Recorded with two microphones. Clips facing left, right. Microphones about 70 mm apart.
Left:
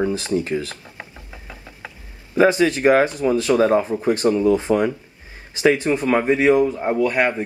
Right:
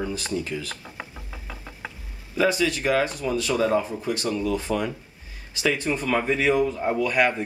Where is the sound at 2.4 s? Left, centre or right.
Left.